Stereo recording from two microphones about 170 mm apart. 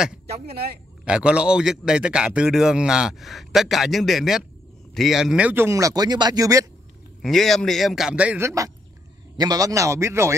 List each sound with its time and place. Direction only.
0.5 s speech: 65° right (ahead or behind)
1.0 s a man's voice: 5° right (ahead or behind)
7.2 s a man's voice: centre (ahead or behind); by 10.3 s 15° right (ahead or behind)